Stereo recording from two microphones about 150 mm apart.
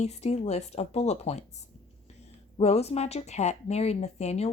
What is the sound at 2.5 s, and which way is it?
Speech, 45° left (ahead or behind).